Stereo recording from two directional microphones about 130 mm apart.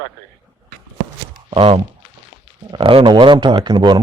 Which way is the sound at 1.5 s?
45° right (ahead or behind).